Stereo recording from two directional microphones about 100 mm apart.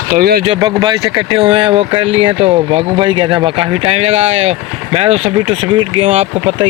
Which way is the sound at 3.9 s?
90° right.